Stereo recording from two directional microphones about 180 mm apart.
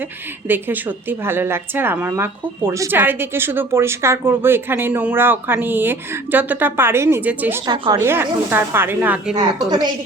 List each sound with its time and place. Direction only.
0.4 s a woman's voice: 10° right (ahead or behind)
9.6 s a woman's voice: 25° right (ahead or behind)